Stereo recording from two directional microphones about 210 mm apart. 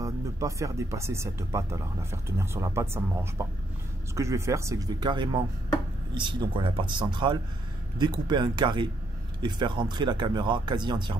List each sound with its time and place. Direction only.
0.0 s speech: 15° right (ahead or behind)